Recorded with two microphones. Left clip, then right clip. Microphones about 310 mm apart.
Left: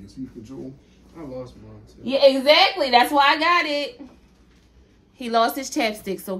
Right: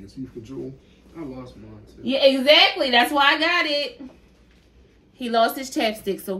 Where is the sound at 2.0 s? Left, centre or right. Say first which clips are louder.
Left 1 dB; centre.